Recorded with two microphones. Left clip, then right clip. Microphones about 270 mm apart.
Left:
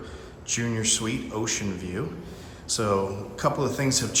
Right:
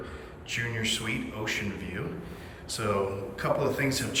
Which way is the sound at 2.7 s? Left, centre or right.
Centre.